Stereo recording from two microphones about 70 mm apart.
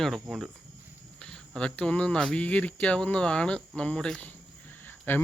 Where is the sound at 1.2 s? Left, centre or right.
Centre.